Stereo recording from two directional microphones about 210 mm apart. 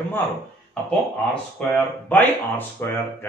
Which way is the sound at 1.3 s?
5° left (ahead or behind).